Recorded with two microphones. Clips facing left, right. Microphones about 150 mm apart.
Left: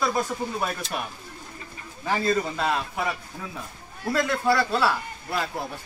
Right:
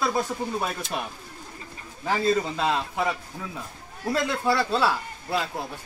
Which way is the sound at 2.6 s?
20° right (ahead or behind).